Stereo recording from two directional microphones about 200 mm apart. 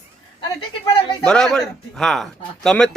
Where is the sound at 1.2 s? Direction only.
5° left (ahead or behind).